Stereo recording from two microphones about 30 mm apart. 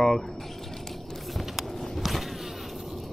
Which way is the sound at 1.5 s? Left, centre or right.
Centre.